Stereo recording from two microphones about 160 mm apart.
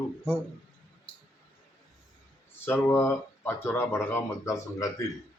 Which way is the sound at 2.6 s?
15° left (ahead or behind).